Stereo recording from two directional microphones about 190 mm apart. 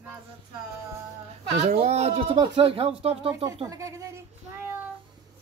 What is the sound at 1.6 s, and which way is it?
Speech, 35° right (ahead or behind).